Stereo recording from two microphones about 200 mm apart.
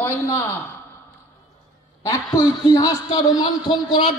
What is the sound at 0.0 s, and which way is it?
Speech, 10° left (ahead or behind).